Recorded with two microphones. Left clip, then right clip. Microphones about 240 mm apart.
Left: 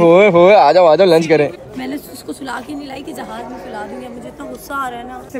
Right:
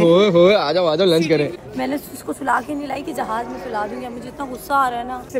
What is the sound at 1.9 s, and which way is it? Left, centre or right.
A woman's voice, centre.